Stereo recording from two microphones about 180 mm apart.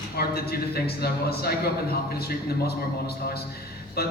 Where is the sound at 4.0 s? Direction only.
60° left (ahead or behind).